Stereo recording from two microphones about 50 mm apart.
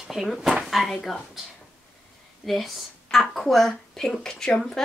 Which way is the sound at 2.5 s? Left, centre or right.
Centre.